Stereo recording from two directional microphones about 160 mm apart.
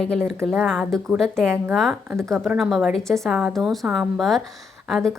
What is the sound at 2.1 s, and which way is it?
Speech, 15° right (ahead or behind).